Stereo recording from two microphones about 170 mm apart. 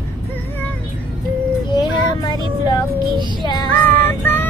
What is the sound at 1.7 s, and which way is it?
Child singing, 25° left (ahead or behind).